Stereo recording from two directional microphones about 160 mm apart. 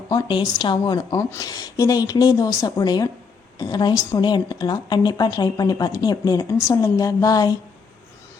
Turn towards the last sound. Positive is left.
turn(degrees=25)  # may be behind; listen again after turning